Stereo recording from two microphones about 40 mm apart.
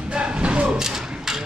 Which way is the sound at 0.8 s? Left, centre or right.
Centre.